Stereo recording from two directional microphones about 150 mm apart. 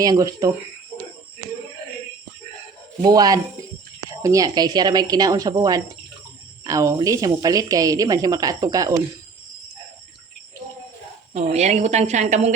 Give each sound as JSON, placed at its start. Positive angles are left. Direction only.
{"t": 0.0, "sound": "a woman's voice", "side_deg": -25}
{"t": 3.0, "sound": "a woman's voice", "side_deg": -25}
{"t": 11.3, "sound": "a woman's voice", "side_deg": -50}